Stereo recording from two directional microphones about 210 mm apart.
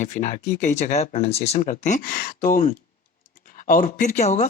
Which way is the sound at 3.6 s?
40° left (ahead or behind).